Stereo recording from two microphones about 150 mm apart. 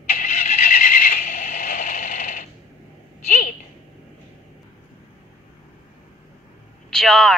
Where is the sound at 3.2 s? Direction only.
60° left (ahead or behind).